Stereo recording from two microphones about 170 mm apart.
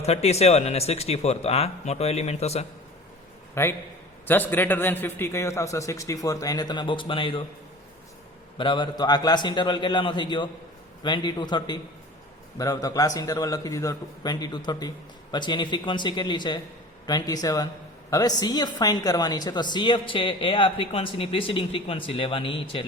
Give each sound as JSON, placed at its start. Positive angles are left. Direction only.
{"t": 0.0, "sound": "a woman's voice", "side_deg": 40}
{"t": 3.5, "sound": "a man's voice", "side_deg": 15}
{"t": 8.5, "sound": "a man's voice", "side_deg": 30}